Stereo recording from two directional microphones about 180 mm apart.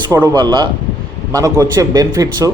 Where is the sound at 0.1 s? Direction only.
25° right (ahead or behind).